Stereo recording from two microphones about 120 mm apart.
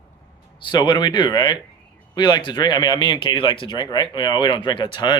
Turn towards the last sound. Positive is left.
turn(degrees=40)  # may be behind; listen again after turning